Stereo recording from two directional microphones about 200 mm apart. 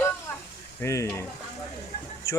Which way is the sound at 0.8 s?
10° left (ahead or behind).